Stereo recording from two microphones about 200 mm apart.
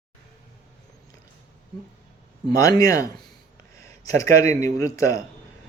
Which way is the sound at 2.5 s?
15° left (ahead or behind).